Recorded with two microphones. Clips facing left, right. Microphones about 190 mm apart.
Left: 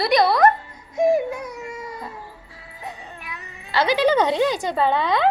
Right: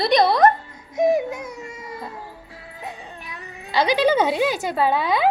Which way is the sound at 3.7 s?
15° right (ahead or behind).